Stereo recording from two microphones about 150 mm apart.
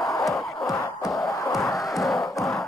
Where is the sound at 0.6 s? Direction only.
25° left (ahead or behind).